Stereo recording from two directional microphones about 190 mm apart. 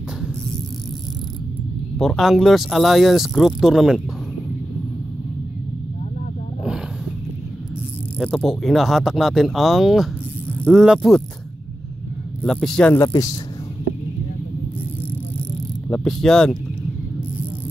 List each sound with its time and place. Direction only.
2.0 s speech: centre (ahead or behind)
8.2 s speech: 5° left (ahead or behind)
12.4 s speech: 5° left (ahead or behind)
13.0 s speech: 20° left (ahead or behind)
15.9 s speech: 5° left (ahead or behind)